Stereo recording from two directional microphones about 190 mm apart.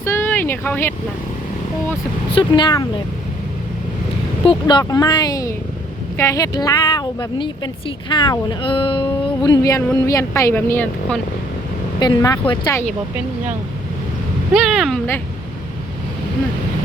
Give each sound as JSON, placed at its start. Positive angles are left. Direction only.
{"t": 0.0, "sound": "a sound", "side_deg": 15}
{"t": 2.3, "sound": "speech", "side_deg": 25}
{"t": 4.4, "sound": "speech", "side_deg": 20}
{"t": 14.5, "sound": "speech", "side_deg": 0}